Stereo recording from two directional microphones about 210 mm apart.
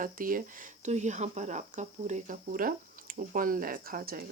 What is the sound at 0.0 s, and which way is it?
Speech, 40° right (ahead or behind).